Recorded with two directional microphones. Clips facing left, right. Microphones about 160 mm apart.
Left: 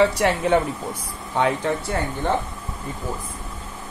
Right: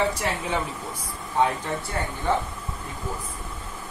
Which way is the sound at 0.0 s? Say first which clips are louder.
Left 7 dB; 75° left (ahead or behind).